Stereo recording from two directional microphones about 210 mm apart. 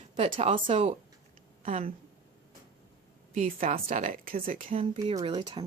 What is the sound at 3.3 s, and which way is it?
Speech, 35° right (ahead or behind).